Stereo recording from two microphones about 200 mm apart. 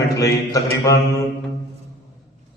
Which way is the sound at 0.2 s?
15° left (ahead or behind).